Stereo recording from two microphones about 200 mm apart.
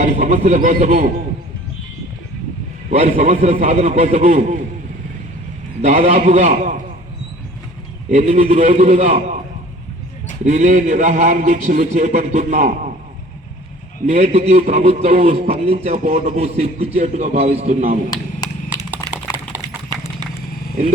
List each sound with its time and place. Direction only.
0.0 s speech: 35° right (ahead or behind)
2.9 s a man's voice: 30° right (ahead or behind)
5.8 s a man's voice: 30° right (ahead or behind)
8.1 s a man's voice: 35° right (ahead or behind)
10.4 s a man's voice: 35° right (ahead or behind)
14.1 s a man's voice: 30° right (ahead or behind)
19.1 s clip-clop: 15° right (ahead or behind)